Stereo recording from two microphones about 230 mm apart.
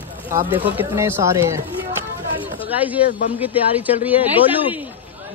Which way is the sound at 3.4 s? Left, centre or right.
Centre.